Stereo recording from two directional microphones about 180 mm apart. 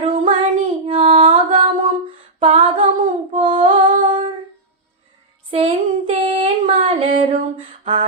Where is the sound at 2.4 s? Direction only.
30° right (ahead or behind).